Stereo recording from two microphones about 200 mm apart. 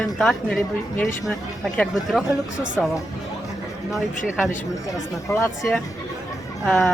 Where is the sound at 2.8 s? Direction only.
5° left (ahead or behind).